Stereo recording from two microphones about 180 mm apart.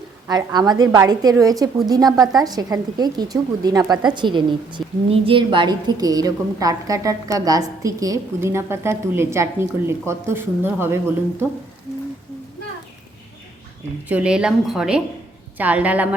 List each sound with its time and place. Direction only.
0.3 s a woman's voice: 20° right (ahead or behind)
14.1 s a woman's voice: 5° right (ahead or behind)